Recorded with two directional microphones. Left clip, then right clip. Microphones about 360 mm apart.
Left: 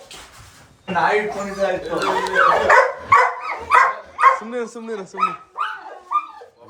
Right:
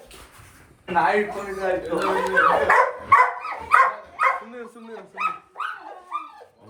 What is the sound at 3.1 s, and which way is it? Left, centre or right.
Dog, centre.